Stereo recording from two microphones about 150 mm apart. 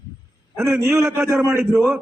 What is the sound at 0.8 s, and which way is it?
Speech, 20° right (ahead or behind).